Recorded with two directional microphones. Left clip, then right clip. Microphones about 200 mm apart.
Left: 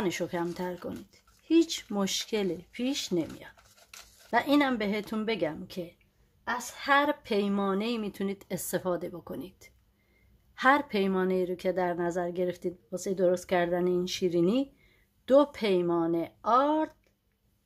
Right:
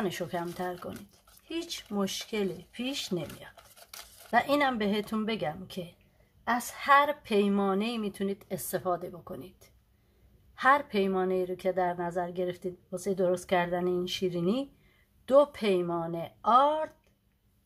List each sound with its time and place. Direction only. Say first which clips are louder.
0.0 s a woman's voice: left 2 dB; 30° left (ahead or behind)
4.3 s speech: even; 30° left (ahead or behind)
6.8 s a woman's voice: right 2 dB; 30° left (ahead or behind)